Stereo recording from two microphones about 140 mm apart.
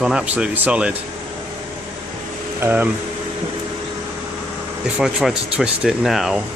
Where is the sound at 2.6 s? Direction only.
15° right (ahead or behind).